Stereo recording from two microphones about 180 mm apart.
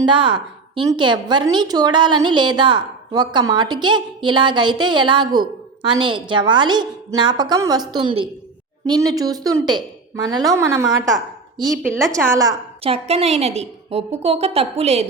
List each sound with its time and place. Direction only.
0.0 s a woman's voice: 25° right (ahead or behind)
11.6 s speech: centre (ahead or behind)
12.1 s a woman's voice: 20° right (ahead or behind)
12.8 s a woman's voice: 30° right (ahead or behind)